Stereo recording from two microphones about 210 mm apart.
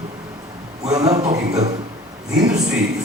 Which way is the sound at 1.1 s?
30° right (ahead or behind).